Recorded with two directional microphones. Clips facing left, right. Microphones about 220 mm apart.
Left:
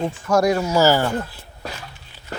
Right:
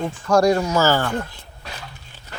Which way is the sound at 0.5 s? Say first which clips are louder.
Left 2 dB; 10° left (ahead or behind).